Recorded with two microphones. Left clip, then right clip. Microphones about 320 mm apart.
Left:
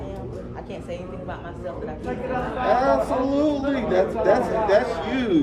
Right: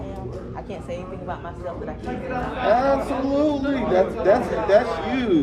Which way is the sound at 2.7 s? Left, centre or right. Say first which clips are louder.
Even; centre.